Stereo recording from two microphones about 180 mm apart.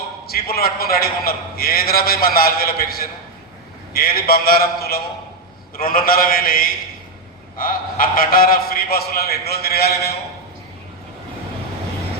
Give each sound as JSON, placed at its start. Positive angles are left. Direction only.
{"t": 0.3, "sound": "a man's voice", "side_deg": 60}